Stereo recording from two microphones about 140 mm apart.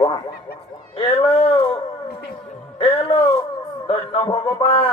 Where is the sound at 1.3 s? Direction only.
45° left (ahead or behind).